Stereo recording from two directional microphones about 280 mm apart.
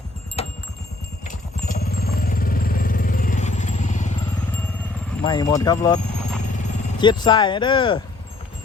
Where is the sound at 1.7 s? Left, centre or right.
Left.